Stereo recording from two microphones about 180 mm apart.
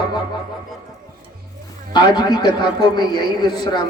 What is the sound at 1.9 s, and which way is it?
A man's voice, 25° left (ahead or behind).